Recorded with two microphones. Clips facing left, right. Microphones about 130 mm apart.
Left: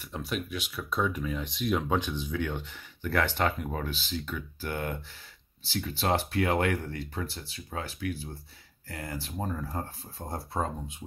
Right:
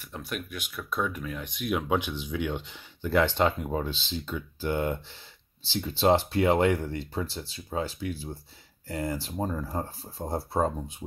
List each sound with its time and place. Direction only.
0.1 s speech: centre (ahead or behind); by 10.6 s 35° right (ahead or behind)